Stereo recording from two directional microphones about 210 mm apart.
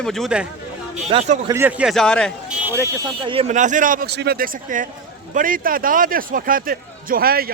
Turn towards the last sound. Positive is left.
turn(degrees=-45)  # may be behind; listen again after turning